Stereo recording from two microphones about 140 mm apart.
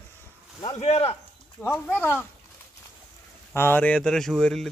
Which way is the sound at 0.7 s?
50° left (ahead or behind).